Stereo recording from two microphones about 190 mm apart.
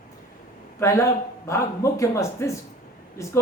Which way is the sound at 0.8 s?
15° left (ahead or behind).